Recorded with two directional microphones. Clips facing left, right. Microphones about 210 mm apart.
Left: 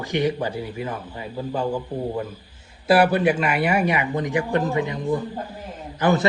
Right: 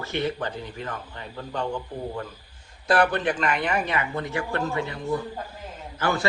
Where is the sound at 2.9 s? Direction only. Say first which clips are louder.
Left 5 dB; 10° left (ahead or behind).